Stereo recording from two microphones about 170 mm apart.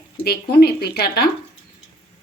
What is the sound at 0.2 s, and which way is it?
Speech, 65° left (ahead or behind).